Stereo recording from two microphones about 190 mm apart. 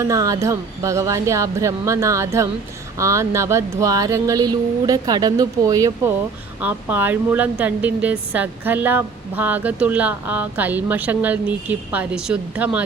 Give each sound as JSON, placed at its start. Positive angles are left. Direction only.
{"t": 0.0, "sound": "a woman's voice", "side_deg": -15}